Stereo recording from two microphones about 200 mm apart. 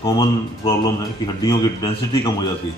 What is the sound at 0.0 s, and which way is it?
Speech, 20° left (ahead or behind).